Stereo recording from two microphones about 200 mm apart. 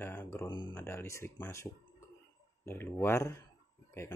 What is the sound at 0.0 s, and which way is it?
Speech, 10° left (ahead or behind).